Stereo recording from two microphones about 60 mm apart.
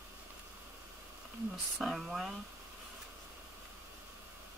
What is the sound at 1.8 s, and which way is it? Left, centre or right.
Speech, centre.